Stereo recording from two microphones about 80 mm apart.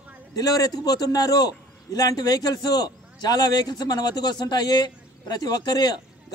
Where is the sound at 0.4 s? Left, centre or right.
Left.